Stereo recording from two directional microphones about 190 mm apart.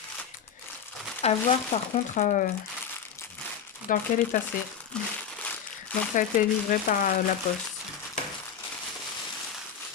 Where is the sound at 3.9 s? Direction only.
45° left (ahead or behind).